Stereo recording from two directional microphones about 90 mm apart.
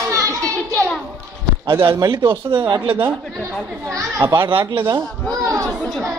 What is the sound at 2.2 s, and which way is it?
Speech, 60° right (ahead or behind).